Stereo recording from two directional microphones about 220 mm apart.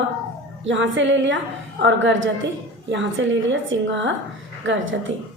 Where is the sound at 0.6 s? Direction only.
55° right (ahead or behind).